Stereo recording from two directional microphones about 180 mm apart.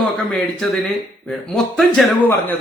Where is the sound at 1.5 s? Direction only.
Centre (ahead or behind).